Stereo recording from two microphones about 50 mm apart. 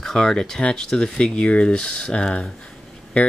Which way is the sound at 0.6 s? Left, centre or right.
Left.